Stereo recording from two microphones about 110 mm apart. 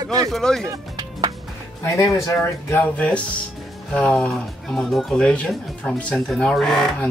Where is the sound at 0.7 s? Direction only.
35° right (ahead or behind).